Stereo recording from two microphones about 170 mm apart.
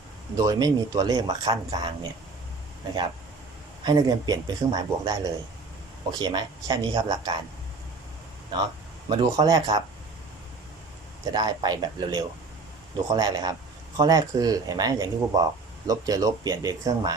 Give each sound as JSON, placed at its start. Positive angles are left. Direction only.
{"t": 0.3, "sound": "speech", "side_deg": -20}
{"t": 3.8, "sound": "speech", "side_deg": -25}
{"t": 9.0, "sound": "speech", "side_deg": -25}
{"t": 11.3, "sound": "speech", "side_deg": -25}